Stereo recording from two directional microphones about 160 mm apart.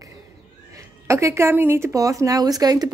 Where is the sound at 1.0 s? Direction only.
20° right (ahead or behind).